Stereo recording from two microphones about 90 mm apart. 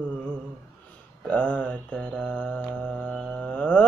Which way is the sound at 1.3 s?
10° left (ahead or behind).